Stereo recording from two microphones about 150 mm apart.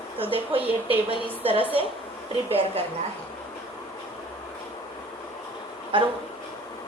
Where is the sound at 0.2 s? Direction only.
35° right (ahead or behind).